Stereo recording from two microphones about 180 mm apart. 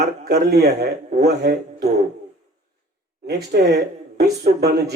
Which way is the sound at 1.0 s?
40° right (ahead or behind).